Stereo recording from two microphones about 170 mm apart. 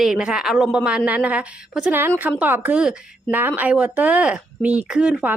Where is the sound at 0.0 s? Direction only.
5° right (ahead or behind).